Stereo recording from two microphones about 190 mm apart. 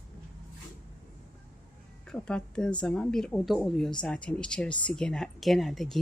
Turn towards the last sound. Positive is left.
turn(degrees=0)  # may be behind; listen again after turning